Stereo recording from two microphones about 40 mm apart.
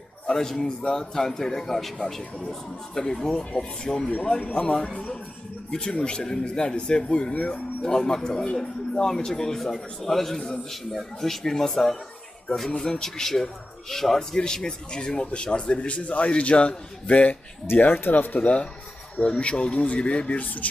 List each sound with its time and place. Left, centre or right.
0.3 s a man's voice: centre
6.0 s a man's voice: centre
7.9 s a man's voice: centre
14.3 s a man's voice: left
17.8 s speech: left
19.2 s speech: left